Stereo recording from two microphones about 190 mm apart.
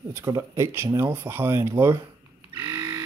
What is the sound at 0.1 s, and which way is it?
Speech, 15° right (ahead or behind).